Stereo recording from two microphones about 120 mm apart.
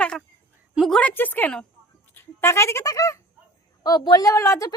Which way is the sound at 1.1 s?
15° left (ahead or behind).